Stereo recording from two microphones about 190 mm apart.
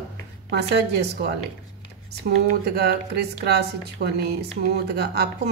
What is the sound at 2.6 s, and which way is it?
A woman's voice, 55° right (ahead or behind).